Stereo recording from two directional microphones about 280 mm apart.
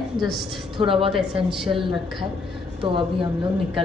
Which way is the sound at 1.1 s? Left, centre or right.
Centre.